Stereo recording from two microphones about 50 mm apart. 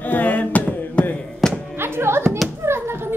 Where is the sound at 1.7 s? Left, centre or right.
Right.